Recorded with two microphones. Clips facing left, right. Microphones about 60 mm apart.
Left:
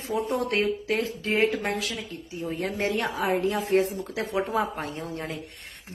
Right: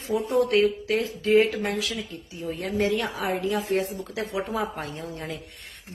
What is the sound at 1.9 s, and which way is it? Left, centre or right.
A woman's voice, left.